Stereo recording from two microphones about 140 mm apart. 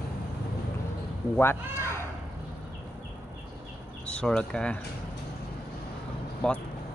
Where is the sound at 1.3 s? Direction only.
15° left (ahead or behind).